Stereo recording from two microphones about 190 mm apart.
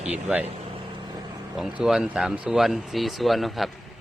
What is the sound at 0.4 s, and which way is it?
Vehicle, 25° right (ahead or behind).